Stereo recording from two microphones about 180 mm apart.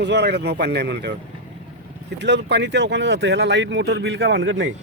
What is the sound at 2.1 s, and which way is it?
Speech, 75° right (ahead or behind).